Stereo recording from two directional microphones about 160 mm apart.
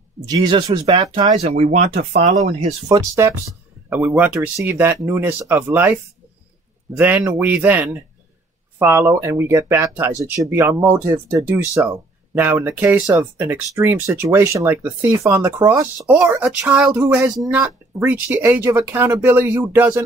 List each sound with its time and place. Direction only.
0.3 s speech: 25° right (ahead or behind)
1.4 s speech: 45° right (ahead or behind)
2.9 s speech: 15° right (ahead or behind)